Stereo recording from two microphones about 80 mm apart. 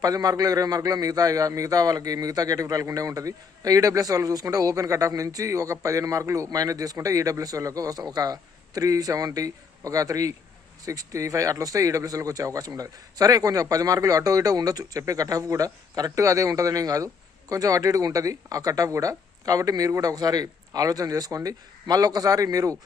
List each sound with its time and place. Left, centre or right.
0.0 s speech: right